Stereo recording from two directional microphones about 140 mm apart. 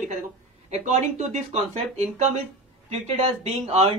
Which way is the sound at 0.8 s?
60° right (ahead or behind).